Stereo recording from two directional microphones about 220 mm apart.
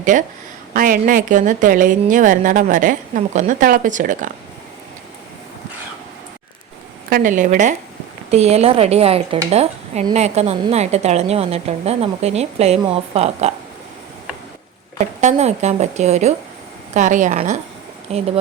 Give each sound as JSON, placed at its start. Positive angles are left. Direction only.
{"t": 0.0, "sound": "a woman's voice", "side_deg": -35}
{"t": 7.1, "sound": "a woman's voice", "side_deg": -35}
{"t": 14.9, "sound": "a woman's voice", "side_deg": -30}